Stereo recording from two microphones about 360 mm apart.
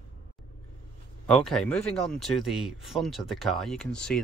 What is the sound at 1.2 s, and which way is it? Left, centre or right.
Speech, centre.